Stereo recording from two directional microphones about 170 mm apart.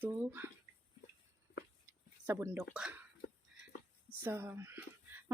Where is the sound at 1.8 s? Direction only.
15° right (ahead or behind).